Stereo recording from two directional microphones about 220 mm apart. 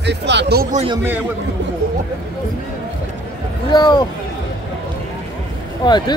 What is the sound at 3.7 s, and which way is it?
Speech, 20° left (ahead or behind).